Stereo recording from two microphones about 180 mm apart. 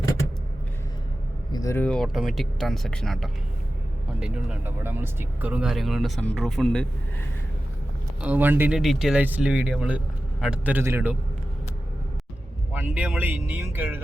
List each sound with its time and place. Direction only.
1.5 s speech: 15° left (ahead or behind)
8.2 s speech: 10° right (ahead or behind)
12.7 s speech: 10° right (ahead or behind)